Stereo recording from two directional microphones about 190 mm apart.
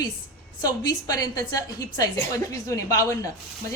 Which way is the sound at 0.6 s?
20° left (ahead or behind).